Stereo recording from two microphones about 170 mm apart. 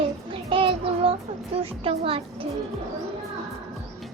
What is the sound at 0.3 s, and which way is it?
Child singing, 30° right (ahead or behind).